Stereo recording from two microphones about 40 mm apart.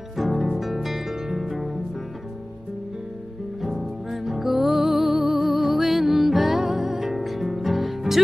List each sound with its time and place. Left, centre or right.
0.2 s music: centre
3.6 s music: centre
5.1 s music: centre
5.4 s music: centre